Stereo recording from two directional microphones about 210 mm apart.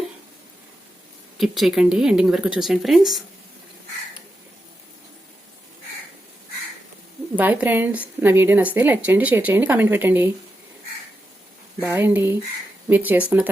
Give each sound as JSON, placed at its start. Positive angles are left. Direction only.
{"t": 1.4, "sound": "speech", "side_deg": 0}
{"t": 7.3, "sound": "a woman's voice", "side_deg": -10}
{"t": 11.8, "sound": "a woman's voice", "side_deg": -10}